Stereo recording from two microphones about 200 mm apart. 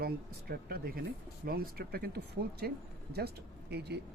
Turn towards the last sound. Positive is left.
turn(degrees=-55)  # may be behind; listen again after turning